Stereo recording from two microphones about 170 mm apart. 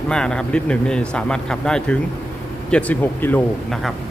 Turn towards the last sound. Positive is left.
turn(degrees=5)  # may be behind; listen again after turning